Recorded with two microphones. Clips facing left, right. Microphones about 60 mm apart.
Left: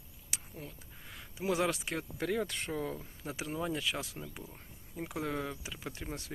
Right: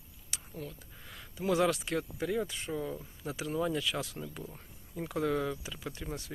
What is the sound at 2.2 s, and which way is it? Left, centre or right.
Speech, left.